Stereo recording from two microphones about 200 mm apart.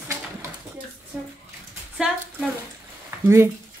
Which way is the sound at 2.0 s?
5° right (ahead or behind).